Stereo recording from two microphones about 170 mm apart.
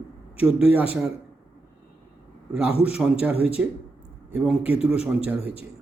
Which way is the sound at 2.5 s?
5° right (ahead or behind).